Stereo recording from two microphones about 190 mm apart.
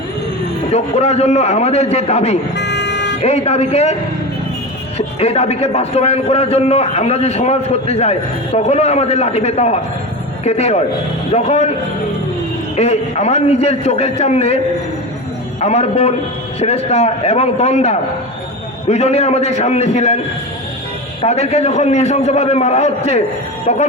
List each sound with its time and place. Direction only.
0.7 s a man's voice: 35° left (ahead or behind)
2.6 s vehicle: 65° left (ahead or behind)
3.2 s a man's voice: 35° left (ahead or behind)
4.9 s a man's voice: 35° left (ahead or behind)
12.7 s a man's voice: 35° left (ahead or behind)
15.6 s a man's voice: 35° left (ahead or behind)
21.2 s a man's voice: 35° left (ahead or behind)